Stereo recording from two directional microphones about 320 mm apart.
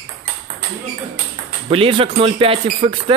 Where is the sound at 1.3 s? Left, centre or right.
Centre.